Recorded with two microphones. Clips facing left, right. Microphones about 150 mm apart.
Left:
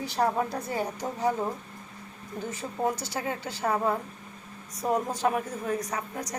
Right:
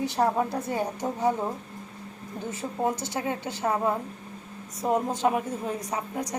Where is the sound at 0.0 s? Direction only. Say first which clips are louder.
Right 2 dB; 20° right (ahead or behind).